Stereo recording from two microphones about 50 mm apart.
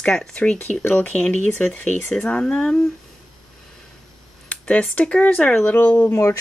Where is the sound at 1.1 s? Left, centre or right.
Left.